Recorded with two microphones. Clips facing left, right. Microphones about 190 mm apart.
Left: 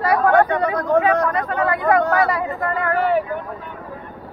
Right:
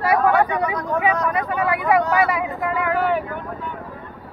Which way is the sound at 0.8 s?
60° left (ahead or behind).